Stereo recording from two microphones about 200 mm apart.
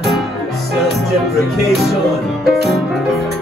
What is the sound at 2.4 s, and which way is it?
Music, centre (ahead or behind).